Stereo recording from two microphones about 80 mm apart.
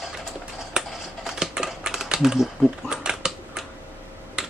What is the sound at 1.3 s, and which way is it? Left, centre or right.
Typing, centre.